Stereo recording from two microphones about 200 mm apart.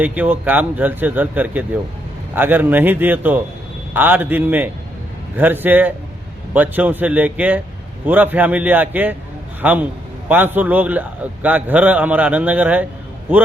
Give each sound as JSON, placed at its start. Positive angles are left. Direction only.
{"t": 0.0, "sound": "a man's voice", "side_deg": -10}